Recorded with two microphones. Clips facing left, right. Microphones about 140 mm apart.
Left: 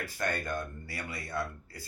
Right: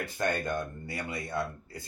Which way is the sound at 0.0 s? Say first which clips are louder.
Right 3 dB; 20° right (ahead or behind).